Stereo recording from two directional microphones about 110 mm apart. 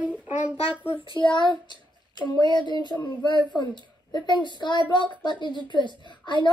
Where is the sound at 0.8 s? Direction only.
50° left (ahead or behind).